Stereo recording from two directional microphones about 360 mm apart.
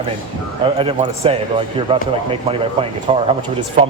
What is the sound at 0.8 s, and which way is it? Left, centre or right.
Speech, centre.